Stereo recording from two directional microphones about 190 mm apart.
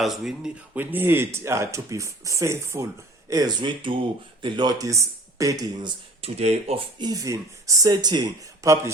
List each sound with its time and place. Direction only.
0.0 s speech: centre (ahead or behind); by 5.9 s 20° right (ahead or behind)
6.2 s speech: 35° right (ahead or behind); by 8.9 s 15° right (ahead or behind)